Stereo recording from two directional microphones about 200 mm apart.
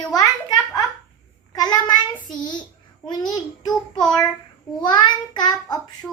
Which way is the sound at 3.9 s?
Centre (ahead or behind).